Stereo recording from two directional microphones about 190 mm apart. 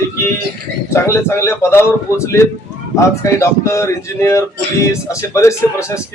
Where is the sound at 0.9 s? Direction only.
15° left (ahead or behind).